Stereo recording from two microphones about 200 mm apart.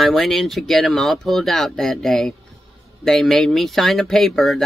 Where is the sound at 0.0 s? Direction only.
Centre (ahead or behind).